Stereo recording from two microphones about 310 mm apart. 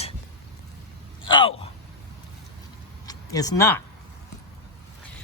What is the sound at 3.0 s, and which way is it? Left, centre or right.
Speech, centre.